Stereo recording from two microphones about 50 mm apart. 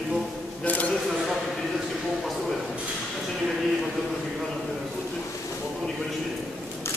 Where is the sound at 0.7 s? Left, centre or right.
Left.